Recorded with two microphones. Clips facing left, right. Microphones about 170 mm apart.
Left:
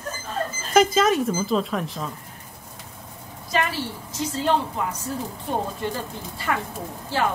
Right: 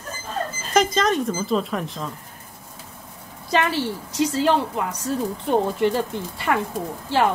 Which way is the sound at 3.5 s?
75° right (ahead or behind).